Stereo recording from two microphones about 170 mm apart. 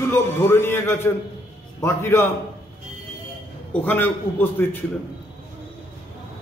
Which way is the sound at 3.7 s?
10° left (ahead or behind).